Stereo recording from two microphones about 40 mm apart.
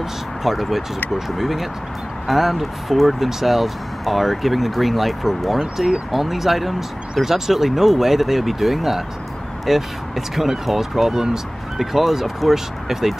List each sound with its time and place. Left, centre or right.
0.4 s speech: centre
5.6 s speech: centre
6.1 s speech: centre